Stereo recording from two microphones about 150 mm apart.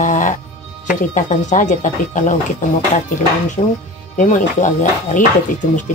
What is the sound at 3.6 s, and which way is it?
Speech, 40° left (ahead or behind).